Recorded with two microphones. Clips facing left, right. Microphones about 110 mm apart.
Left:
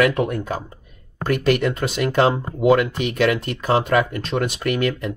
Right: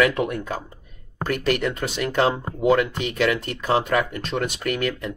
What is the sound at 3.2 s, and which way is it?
Speech, 45° left (ahead or behind).